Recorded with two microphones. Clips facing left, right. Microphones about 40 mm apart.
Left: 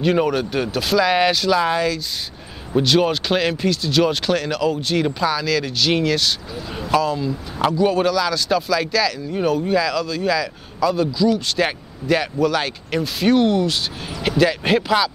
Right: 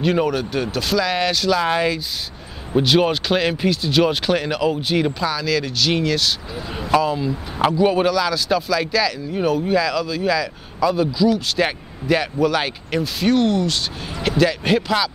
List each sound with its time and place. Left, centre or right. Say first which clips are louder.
0.0 s speech: left 1 dB; centre
1.7 s speech: right 1 dB; centre
5.2 s speech: left 1 dB; centre
6.5 s speech: right 2 dB; centre